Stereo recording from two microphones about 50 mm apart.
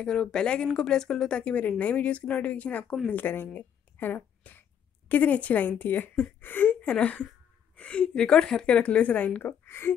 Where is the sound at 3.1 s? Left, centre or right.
Left.